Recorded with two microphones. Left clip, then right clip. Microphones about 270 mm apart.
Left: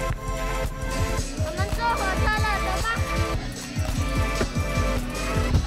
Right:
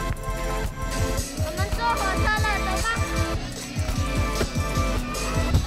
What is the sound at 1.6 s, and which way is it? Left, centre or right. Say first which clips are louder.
Music: even; centre.